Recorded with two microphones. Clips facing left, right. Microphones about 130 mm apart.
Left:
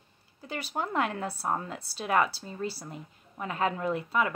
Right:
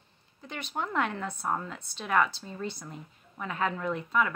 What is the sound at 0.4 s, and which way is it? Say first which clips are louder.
Speech: left 2 dB; 35° left (ahead or behind).